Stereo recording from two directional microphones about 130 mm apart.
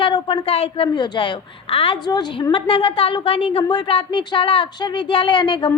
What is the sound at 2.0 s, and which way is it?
A woman's voice, 35° left (ahead or behind).